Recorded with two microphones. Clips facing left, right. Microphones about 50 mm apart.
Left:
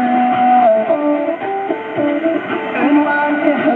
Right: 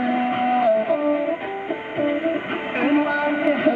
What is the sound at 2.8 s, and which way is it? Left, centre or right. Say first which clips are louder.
Music: left 7 dB; left.